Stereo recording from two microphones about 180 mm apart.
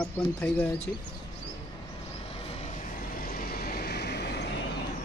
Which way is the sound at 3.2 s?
55° left (ahead or behind).